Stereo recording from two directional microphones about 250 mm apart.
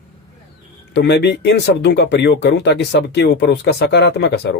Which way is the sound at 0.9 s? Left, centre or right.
Left.